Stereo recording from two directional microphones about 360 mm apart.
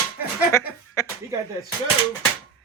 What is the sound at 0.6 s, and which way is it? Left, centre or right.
Speech, centre.